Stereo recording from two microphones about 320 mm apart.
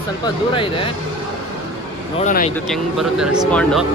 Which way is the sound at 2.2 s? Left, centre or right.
Left.